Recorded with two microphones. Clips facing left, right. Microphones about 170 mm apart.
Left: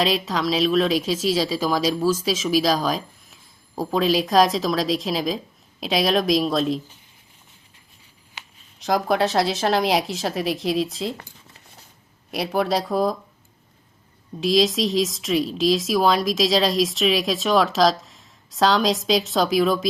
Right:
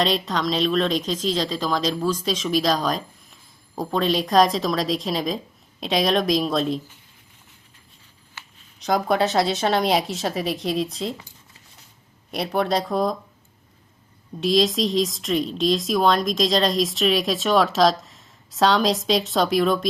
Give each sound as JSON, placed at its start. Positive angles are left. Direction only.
{"t": 0.0, "sound": "speech", "side_deg": 5}
{"t": 8.4, "sound": "a sound", "side_deg": 15}
{"t": 8.8, "sound": "speech", "side_deg": 0}
{"t": 12.3, "sound": "speech", "side_deg": 0}
{"t": 14.4, "sound": "speech", "side_deg": 0}